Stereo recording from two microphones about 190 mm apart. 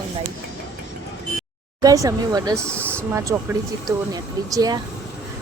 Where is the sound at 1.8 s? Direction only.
20° right (ahead or behind).